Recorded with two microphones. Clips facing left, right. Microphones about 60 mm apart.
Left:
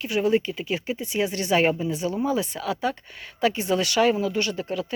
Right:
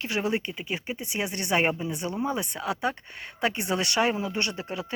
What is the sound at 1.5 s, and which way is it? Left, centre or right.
Speech, right.